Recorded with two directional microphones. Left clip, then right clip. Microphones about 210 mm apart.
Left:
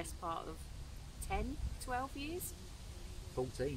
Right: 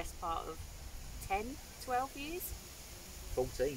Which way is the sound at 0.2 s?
15° left (ahead or behind).